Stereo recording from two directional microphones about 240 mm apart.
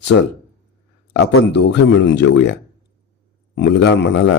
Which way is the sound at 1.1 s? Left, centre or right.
Left.